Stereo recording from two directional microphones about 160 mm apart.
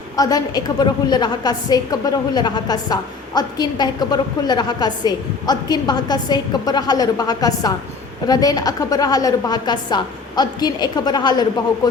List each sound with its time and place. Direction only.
0.2 s a woman's voice: 25° left (ahead or behind)